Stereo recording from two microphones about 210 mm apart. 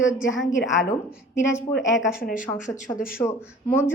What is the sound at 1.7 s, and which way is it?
Speech, 60° left (ahead or behind).